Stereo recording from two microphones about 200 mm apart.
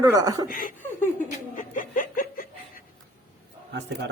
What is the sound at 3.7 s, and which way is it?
Speech, 60° right (ahead or behind).